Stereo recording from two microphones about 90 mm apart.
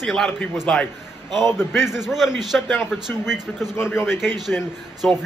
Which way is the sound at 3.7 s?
25° left (ahead or behind).